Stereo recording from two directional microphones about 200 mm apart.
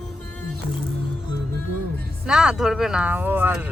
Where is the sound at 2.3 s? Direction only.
5° right (ahead or behind).